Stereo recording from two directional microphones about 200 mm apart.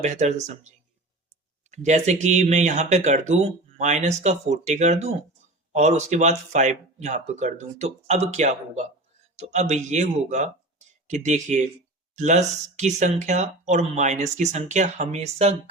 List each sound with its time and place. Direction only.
0.0 s speech: 35° right (ahead or behind)
1.7 s speech: 35° right (ahead or behind)